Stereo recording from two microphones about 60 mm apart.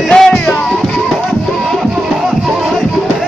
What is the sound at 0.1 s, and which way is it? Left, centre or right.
Music, centre.